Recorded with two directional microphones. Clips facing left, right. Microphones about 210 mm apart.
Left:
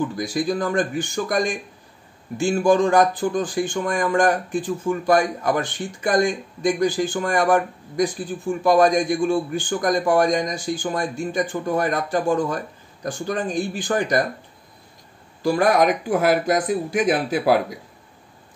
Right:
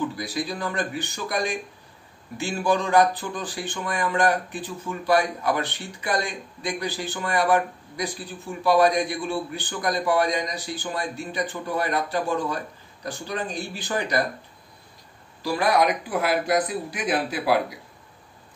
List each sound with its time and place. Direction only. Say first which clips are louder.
0.1 s speech: left 7 dB; 50° left (ahead or behind)
15.4 s speech: left 4 dB; 45° left (ahead or behind)